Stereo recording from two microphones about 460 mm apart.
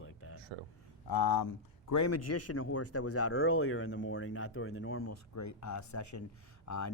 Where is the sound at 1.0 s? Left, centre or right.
Left.